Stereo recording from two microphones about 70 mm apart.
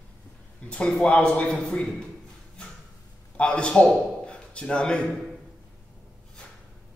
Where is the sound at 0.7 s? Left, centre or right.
Centre.